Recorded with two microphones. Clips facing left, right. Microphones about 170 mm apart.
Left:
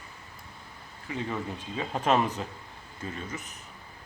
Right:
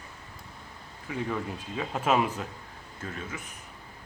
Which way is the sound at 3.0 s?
10° left (ahead or behind).